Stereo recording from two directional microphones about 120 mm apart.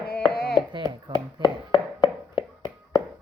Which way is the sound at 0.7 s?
35° right (ahead or behind).